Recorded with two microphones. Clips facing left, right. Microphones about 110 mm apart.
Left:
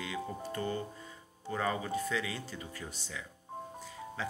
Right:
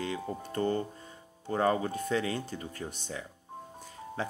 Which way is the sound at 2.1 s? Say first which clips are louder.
Right 5 dB; 45° right (ahead or behind).